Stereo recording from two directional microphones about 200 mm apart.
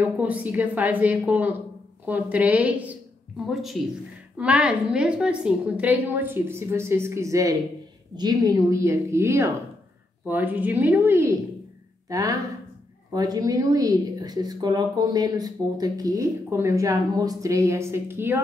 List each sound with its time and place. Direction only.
0.0 s a woman's voice: 10° right (ahead or behind)